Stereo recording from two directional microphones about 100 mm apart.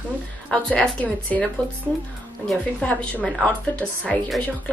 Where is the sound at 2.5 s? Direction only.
10° left (ahead or behind).